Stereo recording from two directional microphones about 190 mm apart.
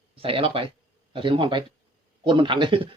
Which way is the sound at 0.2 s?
30° right (ahead or behind).